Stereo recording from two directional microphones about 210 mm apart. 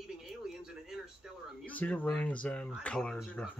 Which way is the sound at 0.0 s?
Centre (ahead or behind).